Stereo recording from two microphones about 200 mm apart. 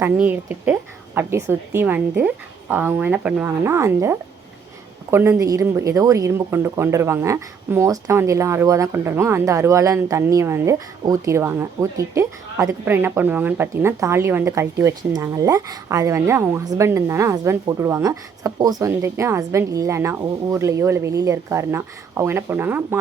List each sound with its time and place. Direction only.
0.0 s speech: 10° right (ahead or behind)